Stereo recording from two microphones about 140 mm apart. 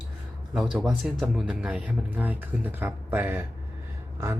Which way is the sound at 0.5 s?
5° right (ahead or behind).